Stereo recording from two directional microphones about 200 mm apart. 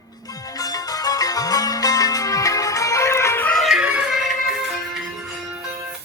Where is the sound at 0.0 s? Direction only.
20° left (ahead or behind); by 5.6 s centre (ahead or behind).